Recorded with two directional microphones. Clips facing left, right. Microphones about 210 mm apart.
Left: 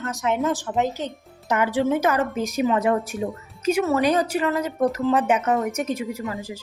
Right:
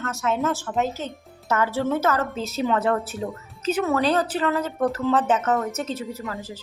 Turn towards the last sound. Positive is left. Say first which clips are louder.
# left 3 dB
turn(degrees=15)  # may be behind; listen again after turning